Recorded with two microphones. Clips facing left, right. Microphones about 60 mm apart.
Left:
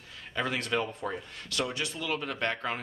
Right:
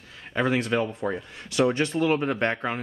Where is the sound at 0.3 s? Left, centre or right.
Right.